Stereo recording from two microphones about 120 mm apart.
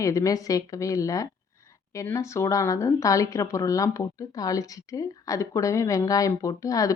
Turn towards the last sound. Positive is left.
turn(degrees=30)  # may be behind; listen again after turning